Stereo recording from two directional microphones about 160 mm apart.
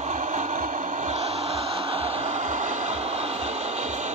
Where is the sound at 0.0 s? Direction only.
50° right (ahead or behind).